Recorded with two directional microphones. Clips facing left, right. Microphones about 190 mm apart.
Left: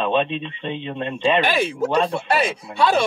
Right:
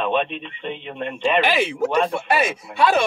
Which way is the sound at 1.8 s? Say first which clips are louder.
Even; 15° right (ahead or behind).